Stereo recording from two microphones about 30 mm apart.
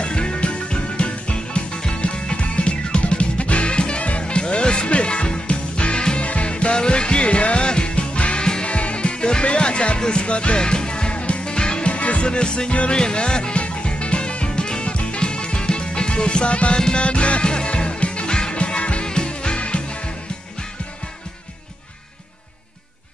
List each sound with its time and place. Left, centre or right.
0.0 s music: left
2.4 s music: left
8.6 s music: left
10.6 s music: left
11.1 s music: left
11.9 s music: left
12.3 s music: left
13.6 s music: left
18.6 s music: left
19.0 s music: left